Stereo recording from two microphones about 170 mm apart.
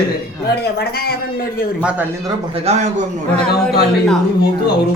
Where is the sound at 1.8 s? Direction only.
5° right (ahead or behind).